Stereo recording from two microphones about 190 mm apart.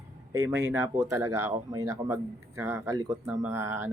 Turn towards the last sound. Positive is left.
turn(degrees=-15)  # may be behind; listen again after turning